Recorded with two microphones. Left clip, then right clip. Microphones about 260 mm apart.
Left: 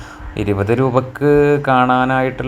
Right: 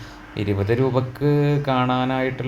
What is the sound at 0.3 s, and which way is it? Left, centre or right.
Mantra, centre.